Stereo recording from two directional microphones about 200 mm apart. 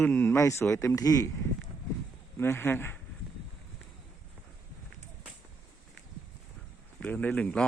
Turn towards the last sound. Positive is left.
turn(degrees=5)  # may be behind; listen again after turning